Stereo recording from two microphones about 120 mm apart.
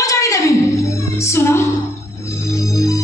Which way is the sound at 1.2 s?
20° left (ahead or behind).